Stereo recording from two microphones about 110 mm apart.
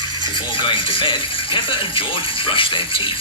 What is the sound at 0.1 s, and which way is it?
Music, 45° left (ahead or behind).